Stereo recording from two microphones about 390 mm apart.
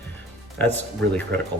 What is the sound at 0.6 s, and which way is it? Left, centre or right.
Speech, centre.